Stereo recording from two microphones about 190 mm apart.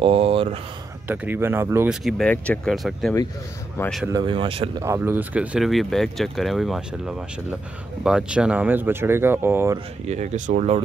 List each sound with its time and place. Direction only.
0.0 s speech: 30° right (ahead or behind)
1.0 s speech: 10° right (ahead or behind)
2.0 s speech: 5° left (ahead or behind)
4.0 s speech: 20° right (ahead or behind)
4.8 s speech: 10° right (ahead or behind)
8.0 s speech: 5° right (ahead or behind)
10.0 s speech: 35° right (ahead or behind)